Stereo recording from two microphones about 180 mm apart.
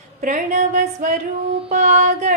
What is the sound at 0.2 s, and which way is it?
Music, 45° right (ahead or behind).